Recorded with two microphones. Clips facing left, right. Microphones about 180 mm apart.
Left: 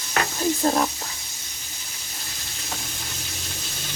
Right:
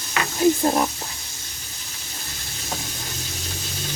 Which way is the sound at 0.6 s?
15° right (ahead or behind).